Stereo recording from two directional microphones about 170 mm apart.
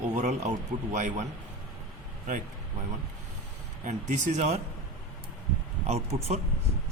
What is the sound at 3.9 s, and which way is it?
Speech, 45° right (ahead or behind).